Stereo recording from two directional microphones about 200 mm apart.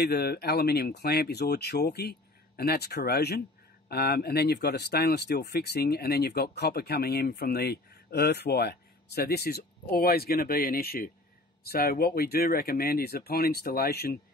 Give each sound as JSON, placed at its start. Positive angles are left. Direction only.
{"t": 0.0, "sound": "speech", "side_deg": 50}